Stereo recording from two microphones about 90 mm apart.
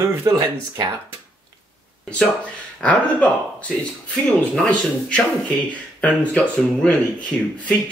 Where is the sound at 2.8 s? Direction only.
15° left (ahead or behind).